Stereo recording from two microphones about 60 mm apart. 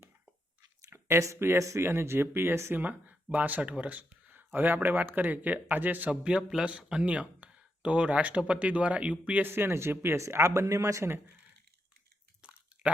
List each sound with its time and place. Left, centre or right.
0.9 s speech: right
3.3 s speech: right
9.5 s speech: right
10.2 s speech: right